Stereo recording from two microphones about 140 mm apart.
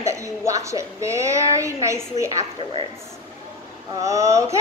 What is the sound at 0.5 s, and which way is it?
A woman's voice, 20° right (ahead or behind).